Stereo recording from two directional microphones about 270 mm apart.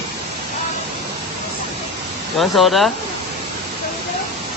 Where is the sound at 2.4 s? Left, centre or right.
Centre.